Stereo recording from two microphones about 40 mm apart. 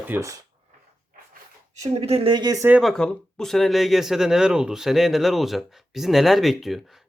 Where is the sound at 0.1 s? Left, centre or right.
Right.